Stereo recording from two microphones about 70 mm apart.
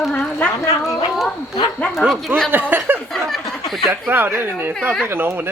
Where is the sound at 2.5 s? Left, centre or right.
Right.